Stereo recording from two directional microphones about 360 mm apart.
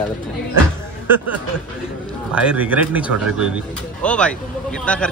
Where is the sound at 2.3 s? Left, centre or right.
Centre.